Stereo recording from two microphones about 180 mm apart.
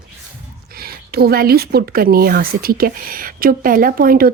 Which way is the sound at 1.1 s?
60° right (ahead or behind).